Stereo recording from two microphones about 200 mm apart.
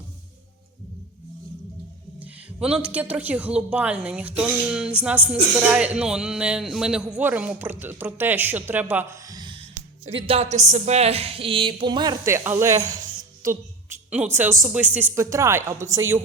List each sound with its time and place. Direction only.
2.1 s a woman's voice: 5° right (ahead or behind)